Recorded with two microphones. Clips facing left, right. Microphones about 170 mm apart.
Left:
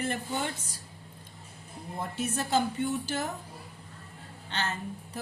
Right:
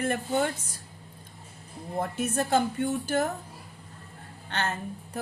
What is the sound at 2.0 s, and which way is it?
Speech, 55° right (ahead or behind).